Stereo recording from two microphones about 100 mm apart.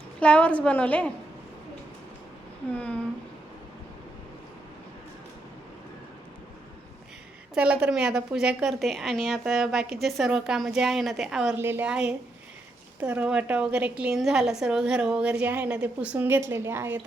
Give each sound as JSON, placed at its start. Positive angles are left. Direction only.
{"t": 0.2, "sound": "a woman's voice", "side_deg": 10}
{"t": 2.7, "sound": "a woman's voice", "side_deg": 10}
{"t": 7.5, "sound": "a woman's voice", "side_deg": -10}
{"t": 11.5, "sound": "a woman's voice", "side_deg": -20}
{"t": 11.9, "sound": "a woman's voice", "side_deg": -10}